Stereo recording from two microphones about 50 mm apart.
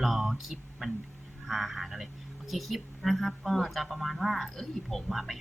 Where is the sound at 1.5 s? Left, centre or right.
Centre.